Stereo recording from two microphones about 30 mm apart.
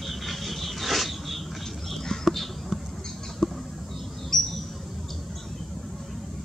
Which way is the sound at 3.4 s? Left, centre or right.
Left.